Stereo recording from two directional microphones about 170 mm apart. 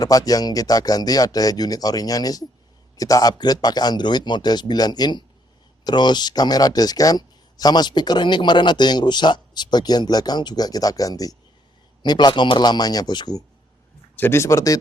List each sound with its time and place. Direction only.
0.0 s speech: 20° left (ahead or behind)